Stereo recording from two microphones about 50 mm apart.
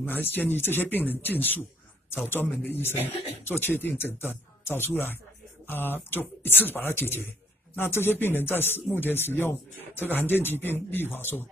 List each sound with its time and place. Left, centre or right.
0.0 s speech: left
2.2 s speech: left